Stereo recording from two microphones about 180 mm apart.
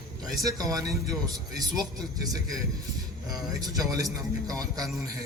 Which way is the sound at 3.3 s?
20° right (ahead or behind).